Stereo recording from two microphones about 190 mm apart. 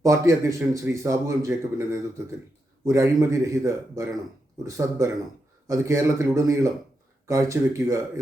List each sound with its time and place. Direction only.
0.0 s a man's voice: 15° right (ahead or behind)